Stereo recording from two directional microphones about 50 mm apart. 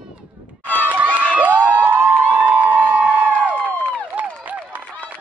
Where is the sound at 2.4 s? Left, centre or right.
Right.